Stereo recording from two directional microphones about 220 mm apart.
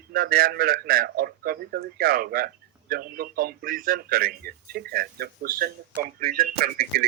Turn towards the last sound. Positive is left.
turn(degrees=-45)  # may be behind; listen again after turning